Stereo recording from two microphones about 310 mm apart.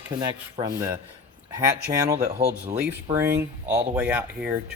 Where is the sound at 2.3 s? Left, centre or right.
Right.